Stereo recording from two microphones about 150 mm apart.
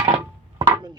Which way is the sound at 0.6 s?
25° right (ahead or behind).